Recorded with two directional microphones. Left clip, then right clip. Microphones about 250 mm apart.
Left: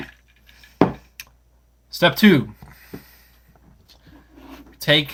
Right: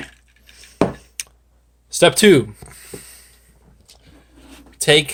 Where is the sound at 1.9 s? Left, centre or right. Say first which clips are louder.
Right 5 dB; right.